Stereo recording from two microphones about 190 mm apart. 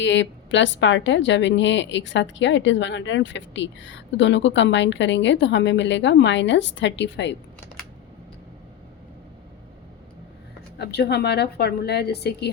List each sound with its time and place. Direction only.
0.0 s a woman's voice: 70° left (ahead or behind)
10.8 s a woman's voice: 60° left (ahead or behind)